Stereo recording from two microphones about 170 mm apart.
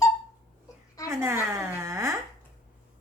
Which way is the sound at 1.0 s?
15° right (ahead or behind).